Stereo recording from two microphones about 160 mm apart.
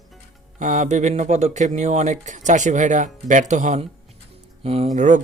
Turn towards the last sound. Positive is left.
turn(degrees=-50)  # may be behind; listen again after turning